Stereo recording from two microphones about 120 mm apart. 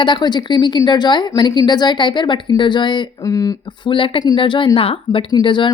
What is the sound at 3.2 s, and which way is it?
Speech, 30° left (ahead or behind).